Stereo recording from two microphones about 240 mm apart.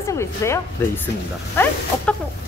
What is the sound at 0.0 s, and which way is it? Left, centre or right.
Speech, centre.